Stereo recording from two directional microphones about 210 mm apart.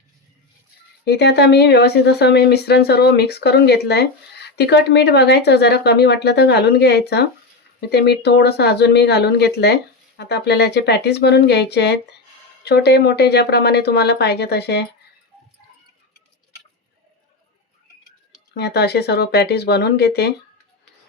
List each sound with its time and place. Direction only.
1.0 s speech: 50° left (ahead or behind)
18.5 s speech: 50° left (ahead or behind)